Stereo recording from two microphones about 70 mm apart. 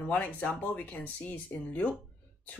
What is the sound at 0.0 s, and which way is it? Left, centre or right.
Speech, left.